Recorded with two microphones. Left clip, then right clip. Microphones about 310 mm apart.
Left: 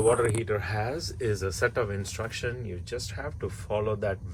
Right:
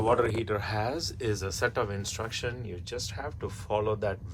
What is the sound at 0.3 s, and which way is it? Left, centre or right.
Speech, centre.